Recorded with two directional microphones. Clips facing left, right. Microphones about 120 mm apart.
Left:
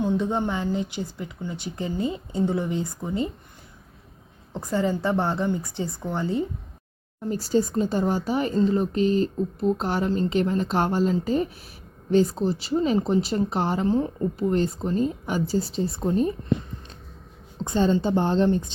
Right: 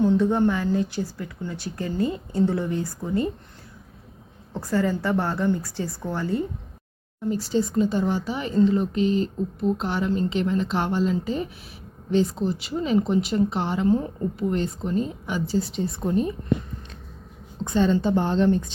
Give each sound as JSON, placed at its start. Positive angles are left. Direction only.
{"t": 0.0, "sound": "speech", "side_deg": 15}
{"t": 4.6, "sound": "speech", "side_deg": 20}
{"t": 7.3, "sound": "speech", "side_deg": 40}
{"t": 17.7, "sound": "speech", "side_deg": 30}